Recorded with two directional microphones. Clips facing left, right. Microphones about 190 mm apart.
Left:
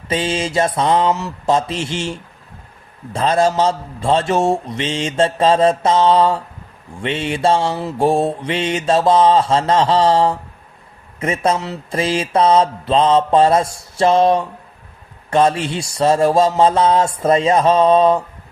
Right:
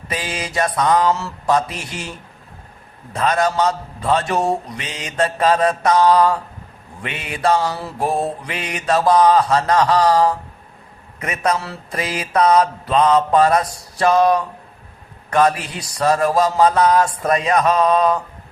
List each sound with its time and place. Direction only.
0.1 s mantra: 25° left (ahead or behind)